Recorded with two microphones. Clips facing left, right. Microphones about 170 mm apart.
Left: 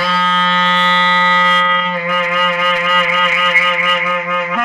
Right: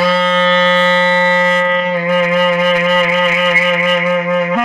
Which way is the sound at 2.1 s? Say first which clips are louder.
Right 7 dB; 30° right (ahead or behind).